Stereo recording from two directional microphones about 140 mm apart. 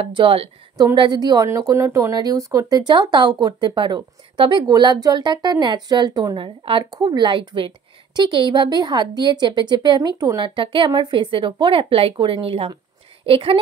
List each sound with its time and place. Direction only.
0.0 s speech: 40° right (ahead or behind)